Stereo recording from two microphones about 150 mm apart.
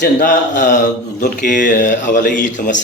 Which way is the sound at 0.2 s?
60° left (ahead or behind).